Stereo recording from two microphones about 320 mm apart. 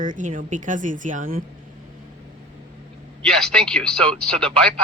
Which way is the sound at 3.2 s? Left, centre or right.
Centre.